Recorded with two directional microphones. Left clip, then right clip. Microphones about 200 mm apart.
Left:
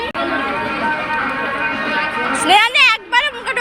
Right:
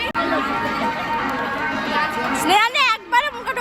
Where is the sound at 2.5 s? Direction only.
5° right (ahead or behind).